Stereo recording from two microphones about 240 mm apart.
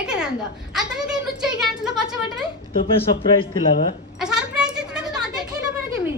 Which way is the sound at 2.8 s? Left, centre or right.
Left.